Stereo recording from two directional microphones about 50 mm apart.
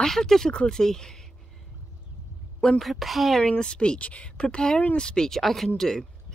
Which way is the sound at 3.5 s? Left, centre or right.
Centre.